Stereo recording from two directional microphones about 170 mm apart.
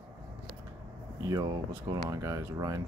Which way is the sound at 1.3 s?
25° right (ahead or behind).